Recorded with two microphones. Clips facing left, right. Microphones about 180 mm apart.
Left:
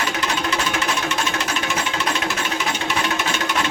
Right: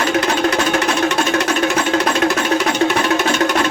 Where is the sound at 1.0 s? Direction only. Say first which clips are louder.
Right 8 dB; 70° right (ahead or behind).